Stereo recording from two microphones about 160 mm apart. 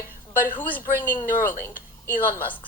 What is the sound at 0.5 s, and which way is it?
A child's voice, 10° left (ahead or behind).